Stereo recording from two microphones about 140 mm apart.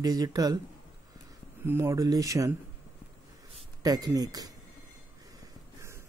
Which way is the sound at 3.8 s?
25° right (ahead or behind).